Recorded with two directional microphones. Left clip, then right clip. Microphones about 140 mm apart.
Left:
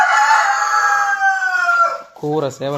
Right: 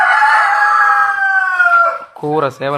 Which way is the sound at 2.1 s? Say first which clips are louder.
Right 3 dB; 15° right (ahead or behind).